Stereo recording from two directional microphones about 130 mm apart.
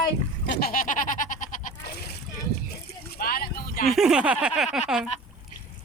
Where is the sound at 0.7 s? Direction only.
90° left.